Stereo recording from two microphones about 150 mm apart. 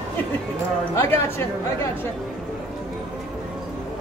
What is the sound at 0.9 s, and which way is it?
Speech, 15° left (ahead or behind).